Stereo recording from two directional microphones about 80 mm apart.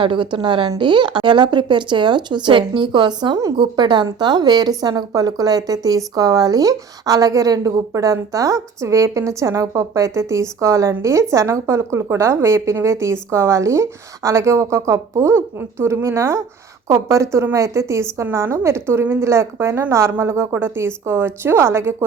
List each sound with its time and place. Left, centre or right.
0.0 s a woman's voice: right
0.8 s a woman's voice: right